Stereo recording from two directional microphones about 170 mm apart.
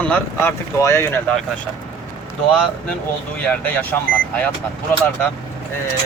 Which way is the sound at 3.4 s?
10° left (ahead or behind).